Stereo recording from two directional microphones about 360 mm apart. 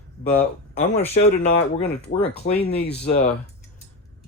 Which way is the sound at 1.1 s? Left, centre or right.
Centre.